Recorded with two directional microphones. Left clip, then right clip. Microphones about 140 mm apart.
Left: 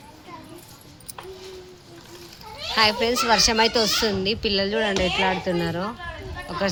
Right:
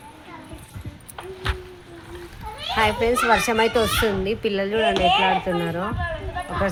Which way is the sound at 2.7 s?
10° left (ahead or behind).